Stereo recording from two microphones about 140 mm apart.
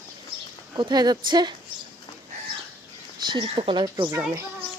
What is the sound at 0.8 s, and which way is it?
Speech, 30° right (ahead or behind).